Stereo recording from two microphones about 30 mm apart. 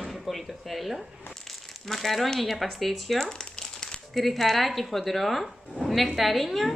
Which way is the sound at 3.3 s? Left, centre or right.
Left.